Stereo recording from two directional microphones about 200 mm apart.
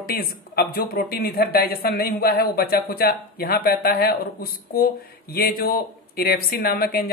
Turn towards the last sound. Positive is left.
turn(degrees=50)  # may be behind; listen again after turning